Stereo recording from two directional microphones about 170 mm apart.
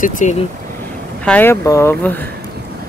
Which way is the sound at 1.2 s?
10° left (ahead or behind).